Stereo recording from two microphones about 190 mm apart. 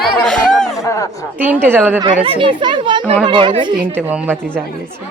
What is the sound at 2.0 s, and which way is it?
Speech, 30° right (ahead or behind).